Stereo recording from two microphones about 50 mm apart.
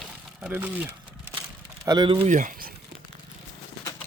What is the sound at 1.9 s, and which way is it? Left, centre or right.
Speech, right.